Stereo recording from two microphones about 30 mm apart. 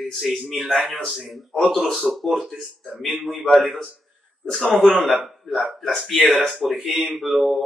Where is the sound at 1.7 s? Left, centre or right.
Centre.